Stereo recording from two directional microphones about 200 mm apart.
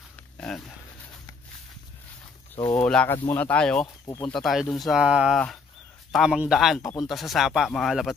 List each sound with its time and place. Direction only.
0.1 s a sound: 5° left (ahead or behind)
2.8 s speech: 5° left (ahead or behind)
3.8 s speech: 20° left (ahead or behind)
4.3 s speech: centre (ahead or behind)
6.8 s speech: 20° left (ahead or behind)
7.1 s speech: centre (ahead or behind)